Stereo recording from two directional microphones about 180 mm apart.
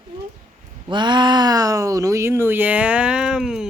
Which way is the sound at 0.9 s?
25° right (ahead or behind).